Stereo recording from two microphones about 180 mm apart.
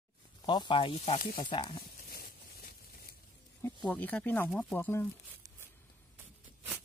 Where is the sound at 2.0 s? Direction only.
60° left (ahead or behind).